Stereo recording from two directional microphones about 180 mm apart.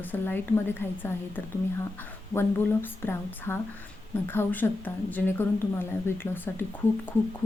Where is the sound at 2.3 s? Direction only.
10° left (ahead or behind).